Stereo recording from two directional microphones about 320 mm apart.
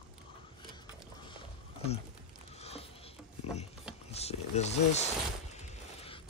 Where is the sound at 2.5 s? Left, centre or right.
Centre.